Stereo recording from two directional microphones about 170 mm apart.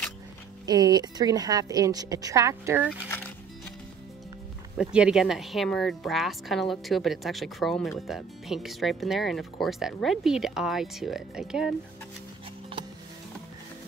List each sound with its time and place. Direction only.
0.7 s a woman's voice: 25° right (ahead or behind)
4.7 s speech: 5° right (ahead or behind)